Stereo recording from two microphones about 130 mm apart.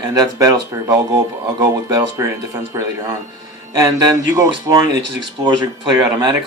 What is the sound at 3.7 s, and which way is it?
A man's voice, 30° right (ahead or behind).